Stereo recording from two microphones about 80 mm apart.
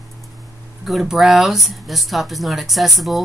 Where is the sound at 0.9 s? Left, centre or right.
Centre.